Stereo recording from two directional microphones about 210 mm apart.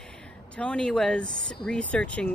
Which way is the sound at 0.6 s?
5° left (ahead or behind).